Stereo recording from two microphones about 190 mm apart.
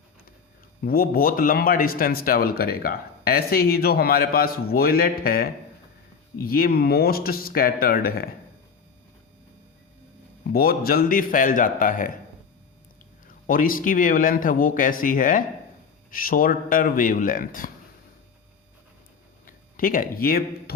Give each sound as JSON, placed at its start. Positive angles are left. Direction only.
{"t": 0.8, "sound": "a man's voice", "side_deg": 50}
{"t": 10.5, "sound": "a man's voice", "side_deg": 50}
{"t": 13.2, "sound": "a man's voice", "side_deg": 45}
{"t": 19.5, "sound": "speech", "side_deg": 45}